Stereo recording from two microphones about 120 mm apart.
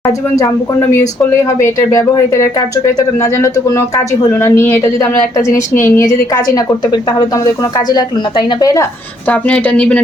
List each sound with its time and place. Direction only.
0.0 s speech: 25° left (ahead or behind)
9.2 s speech: 10° left (ahead or behind)